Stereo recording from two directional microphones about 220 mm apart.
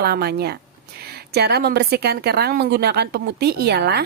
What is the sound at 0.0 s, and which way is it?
Speech, 45° right (ahead or behind).